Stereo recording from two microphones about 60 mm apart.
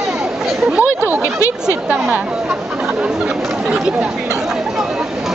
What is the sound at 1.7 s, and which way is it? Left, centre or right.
Speech, centre.